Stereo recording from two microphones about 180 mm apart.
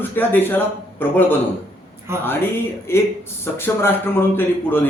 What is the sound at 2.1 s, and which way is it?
Speech, 15° right (ahead or behind).